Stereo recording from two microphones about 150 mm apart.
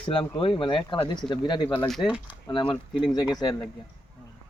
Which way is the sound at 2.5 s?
35° left (ahead or behind).